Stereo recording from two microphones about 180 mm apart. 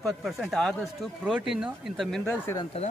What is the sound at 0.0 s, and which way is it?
A man's voice, centre (ahead or behind).